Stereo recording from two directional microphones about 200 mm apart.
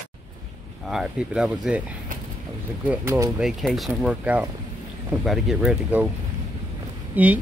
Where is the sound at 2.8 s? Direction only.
10° right (ahead or behind).